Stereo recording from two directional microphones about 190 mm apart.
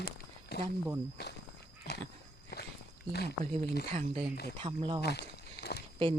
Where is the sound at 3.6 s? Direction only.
55° left (ahead or behind).